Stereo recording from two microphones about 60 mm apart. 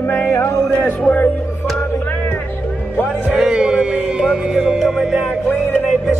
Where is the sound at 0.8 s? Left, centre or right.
Left.